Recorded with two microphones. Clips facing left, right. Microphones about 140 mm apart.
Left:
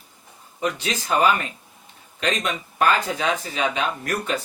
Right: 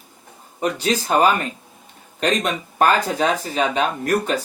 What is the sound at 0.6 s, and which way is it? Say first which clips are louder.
Speech: right 5 dB; 40° right (ahead or behind).